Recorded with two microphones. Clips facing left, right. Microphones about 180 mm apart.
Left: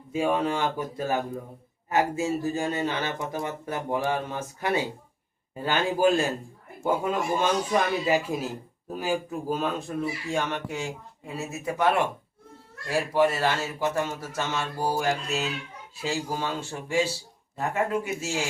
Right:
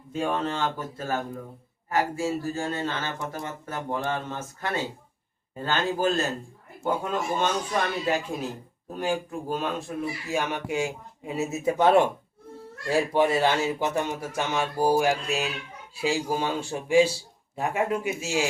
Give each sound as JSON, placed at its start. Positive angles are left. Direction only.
{"t": 0.1, "sound": "speech", "side_deg": 10}
{"t": 13.1, "sound": "speech", "side_deg": -20}